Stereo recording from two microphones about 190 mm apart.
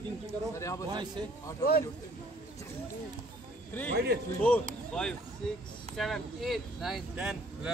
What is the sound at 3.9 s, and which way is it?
Speech, 55° right (ahead or behind).